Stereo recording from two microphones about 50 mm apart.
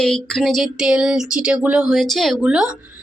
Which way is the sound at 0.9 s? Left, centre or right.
Centre.